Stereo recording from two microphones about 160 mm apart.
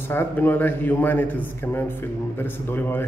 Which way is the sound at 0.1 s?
15° left (ahead or behind).